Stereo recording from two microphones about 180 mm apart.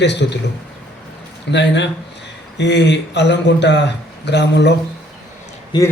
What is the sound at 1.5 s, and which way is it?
Speech, 75° left (ahead or behind).